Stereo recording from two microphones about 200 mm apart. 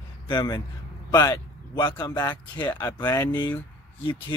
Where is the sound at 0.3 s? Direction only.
20° left (ahead or behind).